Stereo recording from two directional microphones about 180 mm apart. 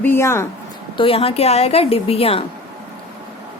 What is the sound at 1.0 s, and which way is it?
Speech, 30° left (ahead or behind).